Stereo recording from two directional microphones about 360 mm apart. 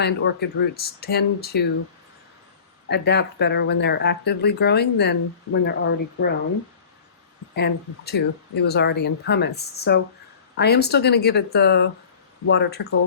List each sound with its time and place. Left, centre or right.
0.0 s speech: left
2.9 s speech: left
7.5 s speech: left